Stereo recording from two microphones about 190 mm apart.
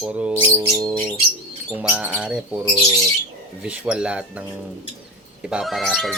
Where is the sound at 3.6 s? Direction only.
5° right (ahead or behind).